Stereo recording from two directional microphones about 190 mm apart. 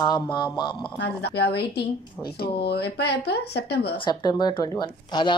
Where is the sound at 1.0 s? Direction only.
60° left (ahead or behind).